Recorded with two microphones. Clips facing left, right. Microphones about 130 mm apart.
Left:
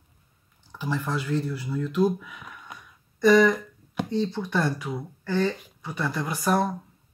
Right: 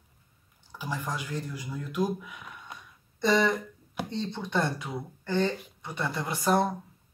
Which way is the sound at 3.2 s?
25° right (ahead or behind).